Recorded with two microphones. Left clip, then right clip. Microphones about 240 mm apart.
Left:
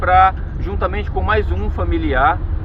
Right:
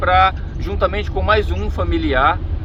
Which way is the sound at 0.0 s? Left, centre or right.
Right.